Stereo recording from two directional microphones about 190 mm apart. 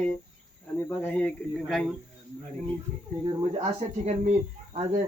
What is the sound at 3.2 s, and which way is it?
Speech, 35° right (ahead or behind).